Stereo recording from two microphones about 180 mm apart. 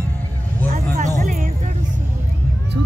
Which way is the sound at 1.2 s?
45° right (ahead or behind).